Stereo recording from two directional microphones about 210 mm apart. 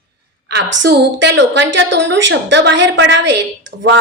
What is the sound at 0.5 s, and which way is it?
A woman's voice, 55° right (ahead or behind).